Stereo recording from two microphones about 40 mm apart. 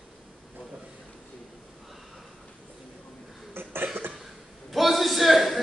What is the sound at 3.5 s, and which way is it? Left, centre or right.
Cough, right.